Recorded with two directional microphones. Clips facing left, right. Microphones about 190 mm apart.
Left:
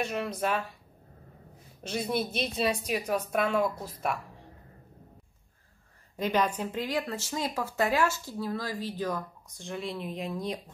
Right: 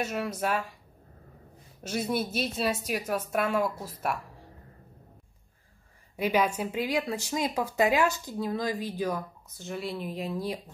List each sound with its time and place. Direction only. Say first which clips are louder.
0.0 s speech: even; 5° right (ahead or behind)
1.8 s a woman's voice: right 1 dB; 5° right (ahead or behind)
6.1 s speech: right 2 dB; 10° right (ahead or behind)